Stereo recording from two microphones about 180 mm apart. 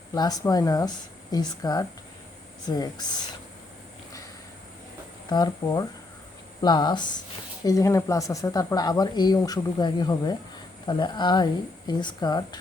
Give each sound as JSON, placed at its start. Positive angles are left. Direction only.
{"t": 0.1, "sound": "speech", "side_deg": 20}
{"t": 5.3, "sound": "speech", "side_deg": 25}